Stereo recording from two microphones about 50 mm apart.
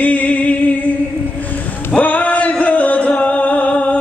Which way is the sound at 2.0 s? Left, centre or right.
Left.